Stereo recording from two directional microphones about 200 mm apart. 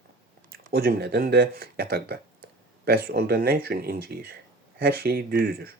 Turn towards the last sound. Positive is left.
turn(degrees=-50)  # may be behind; listen again after turning